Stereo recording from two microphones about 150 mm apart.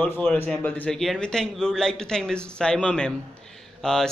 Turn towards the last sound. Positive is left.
turn(degrees=5)  # may be behind; listen again after turning